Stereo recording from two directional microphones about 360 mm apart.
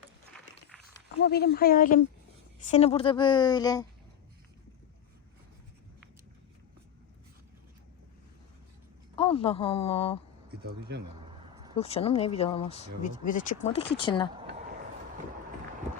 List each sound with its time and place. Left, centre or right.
1.2 s a woman's voice: left; by 3.8 s centre
9.1 s speech: centre
10.5 s speech: right
11.7 s a woman's voice: centre